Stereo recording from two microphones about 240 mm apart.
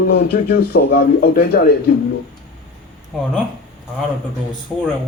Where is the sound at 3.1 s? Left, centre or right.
Centre.